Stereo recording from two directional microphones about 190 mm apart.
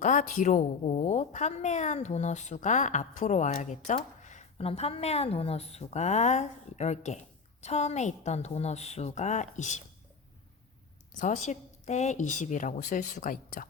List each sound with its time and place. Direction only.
0.0 s a woman's voice: 40° left (ahead or behind)
11.2 s a woman's voice: 40° left (ahead or behind)